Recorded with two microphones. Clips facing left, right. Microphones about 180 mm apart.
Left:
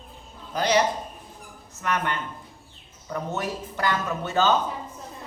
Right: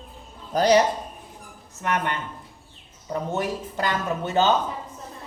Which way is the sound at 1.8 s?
20° right (ahead or behind).